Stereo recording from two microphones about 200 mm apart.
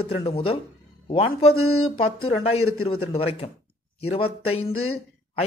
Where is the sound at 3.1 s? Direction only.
30° left (ahead or behind).